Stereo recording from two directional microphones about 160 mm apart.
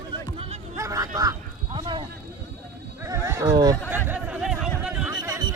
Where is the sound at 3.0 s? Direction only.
20° right (ahead or behind).